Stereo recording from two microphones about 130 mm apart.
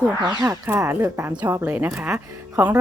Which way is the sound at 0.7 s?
20° right (ahead or behind).